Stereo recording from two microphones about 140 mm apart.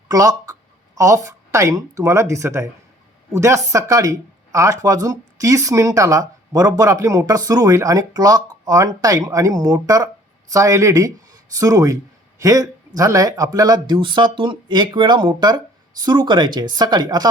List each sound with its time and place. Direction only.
0.1 s a man's voice: 25° right (ahead or behind)